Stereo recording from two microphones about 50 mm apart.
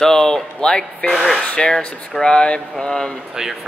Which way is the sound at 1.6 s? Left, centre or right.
Centre.